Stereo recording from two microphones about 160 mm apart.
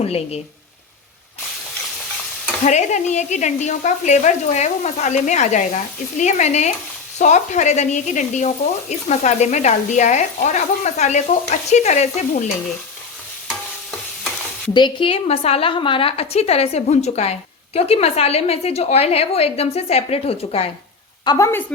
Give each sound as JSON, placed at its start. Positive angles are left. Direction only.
{"t": 0.0, "sound": "a woman's voice", "side_deg": 40}
{"t": 2.6, "sound": "speech", "side_deg": 45}
{"t": 14.7, "sound": "a woman's voice", "side_deg": 30}
{"t": 21.2, "sound": "a woman's voice", "side_deg": 20}